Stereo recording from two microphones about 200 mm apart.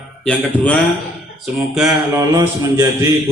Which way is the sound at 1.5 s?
5° right (ahead or behind).